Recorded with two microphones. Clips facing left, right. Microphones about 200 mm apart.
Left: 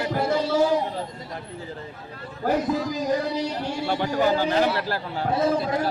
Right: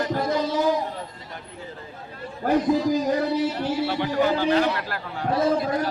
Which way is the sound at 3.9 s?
40° left (ahead or behind).